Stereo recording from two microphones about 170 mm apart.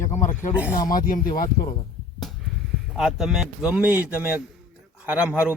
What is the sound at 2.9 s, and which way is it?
Speech, centre (ahead or behind).